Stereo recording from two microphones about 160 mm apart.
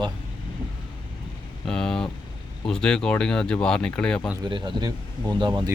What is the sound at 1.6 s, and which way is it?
Speech, 5° left (ahead or behind).